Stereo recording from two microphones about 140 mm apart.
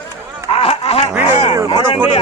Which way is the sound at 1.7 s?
35° left (ahead or behind).